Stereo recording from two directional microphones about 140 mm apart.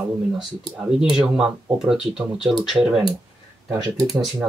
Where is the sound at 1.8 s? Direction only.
5° right (ahead or behind).